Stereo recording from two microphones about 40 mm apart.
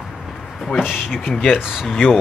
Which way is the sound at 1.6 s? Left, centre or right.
Centre.